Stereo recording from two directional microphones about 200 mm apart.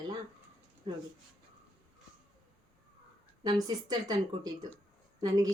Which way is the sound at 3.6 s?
20° right (ahead or behind).